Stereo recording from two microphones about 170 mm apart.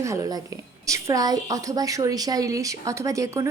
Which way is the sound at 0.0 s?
15° right (ahead or behind).